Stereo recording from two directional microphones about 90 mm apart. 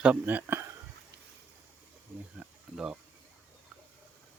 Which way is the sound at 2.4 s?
10° right (ahead or behind).